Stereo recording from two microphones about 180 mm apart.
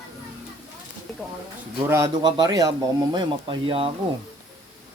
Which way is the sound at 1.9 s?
20° right (ahead or behind).